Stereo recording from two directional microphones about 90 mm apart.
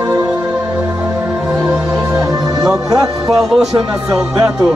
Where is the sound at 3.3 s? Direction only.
5° right (ahead or behind).